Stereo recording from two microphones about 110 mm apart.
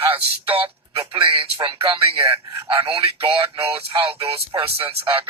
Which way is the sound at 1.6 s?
60° right (ahead or behind).